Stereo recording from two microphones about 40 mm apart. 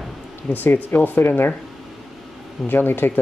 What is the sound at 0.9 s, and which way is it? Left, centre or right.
Speech, left.